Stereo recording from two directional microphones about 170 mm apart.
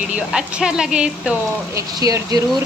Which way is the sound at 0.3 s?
5° right (ahead or behind).